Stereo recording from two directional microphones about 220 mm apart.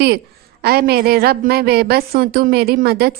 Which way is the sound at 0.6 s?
45° right (ahead or behind).